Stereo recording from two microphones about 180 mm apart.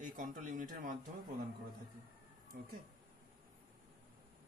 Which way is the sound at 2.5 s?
60° right (ahead or behind).